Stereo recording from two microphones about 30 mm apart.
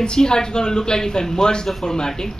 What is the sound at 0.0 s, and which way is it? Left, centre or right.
Speech, left.